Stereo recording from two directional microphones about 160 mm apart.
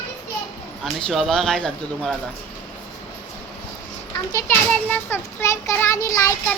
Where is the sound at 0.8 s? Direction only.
5° left (ahead or behind).